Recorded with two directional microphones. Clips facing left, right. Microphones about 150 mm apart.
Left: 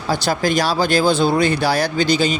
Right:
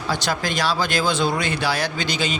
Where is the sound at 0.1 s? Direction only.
40° left (ahead or behind).